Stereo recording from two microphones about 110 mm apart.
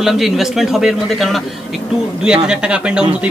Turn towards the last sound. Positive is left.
turn(degrees=-10)  # may be behind; listen again after turning